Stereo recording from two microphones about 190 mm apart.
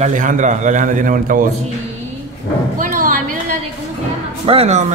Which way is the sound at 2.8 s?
45° right (ahead or behind).